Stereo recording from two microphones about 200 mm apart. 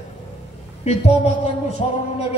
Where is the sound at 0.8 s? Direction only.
30° left (ahead or behind).